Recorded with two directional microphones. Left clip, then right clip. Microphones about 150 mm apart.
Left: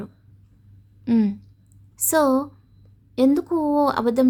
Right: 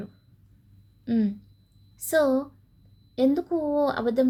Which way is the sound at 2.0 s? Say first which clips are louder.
Left 3 dB; 35° left (ahead or behind).